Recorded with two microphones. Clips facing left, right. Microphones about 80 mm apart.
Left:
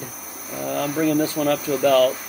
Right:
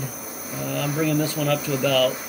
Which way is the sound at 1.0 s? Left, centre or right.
Left.